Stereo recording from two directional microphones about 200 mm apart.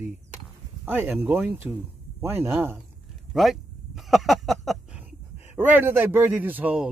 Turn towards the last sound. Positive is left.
turn(degrees=-10)  # may be behind; listen again after turning